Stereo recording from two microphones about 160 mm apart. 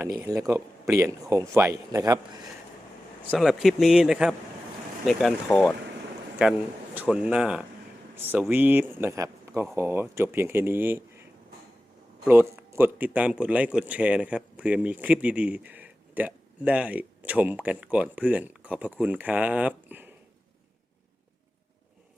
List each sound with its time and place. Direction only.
0.2 s a man's voice: 20° right (ahead or behind)
3.3 s speech: centre (ahead or behind)
6.9 s speech: 10° right (ahead or behind)
12.3 s speech: 15° right (ahead or behind)